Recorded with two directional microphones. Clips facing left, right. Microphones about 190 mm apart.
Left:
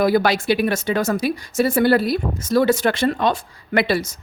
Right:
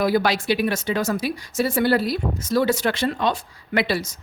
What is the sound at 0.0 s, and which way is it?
Speech, 50° left (ahead or behind).